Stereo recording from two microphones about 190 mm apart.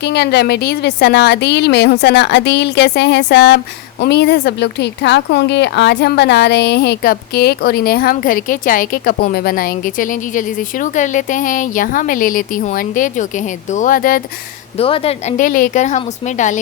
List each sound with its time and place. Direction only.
0.0 s a woman's voice: 60° left (ahead or behind)
14.8 s a woman's voice: 30° left (ahead or behind)